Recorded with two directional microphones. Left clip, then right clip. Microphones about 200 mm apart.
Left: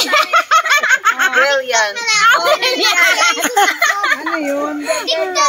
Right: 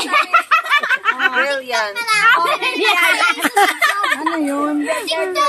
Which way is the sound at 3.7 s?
40° right (ahead or behind).